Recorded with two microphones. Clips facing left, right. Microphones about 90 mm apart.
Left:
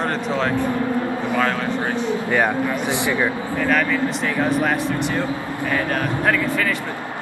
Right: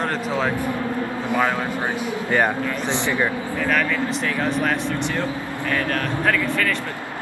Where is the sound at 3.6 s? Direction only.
5° left (ahead or behind).